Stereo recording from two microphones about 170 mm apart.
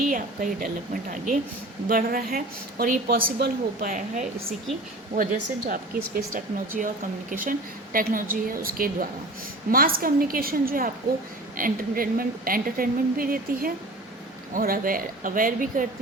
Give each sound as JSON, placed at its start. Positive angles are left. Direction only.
{"t": 0.1, "sound": "speech", "side_deg": -50}
{"t": 1.9, "sound": "a woman's voice", "side_deg": -60}